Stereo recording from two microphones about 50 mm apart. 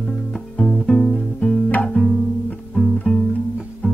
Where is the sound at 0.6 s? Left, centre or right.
Centre.